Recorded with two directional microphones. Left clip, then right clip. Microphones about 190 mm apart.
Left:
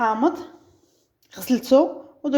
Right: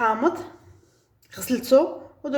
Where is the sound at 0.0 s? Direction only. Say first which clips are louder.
Left 1 dB; 20° left (ahead or behind).